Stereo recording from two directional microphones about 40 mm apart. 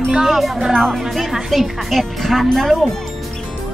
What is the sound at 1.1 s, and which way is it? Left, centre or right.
Speech, centre.